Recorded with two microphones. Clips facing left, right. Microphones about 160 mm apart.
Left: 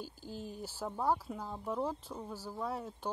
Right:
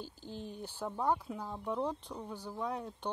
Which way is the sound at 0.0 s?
10° left (ahead or behind).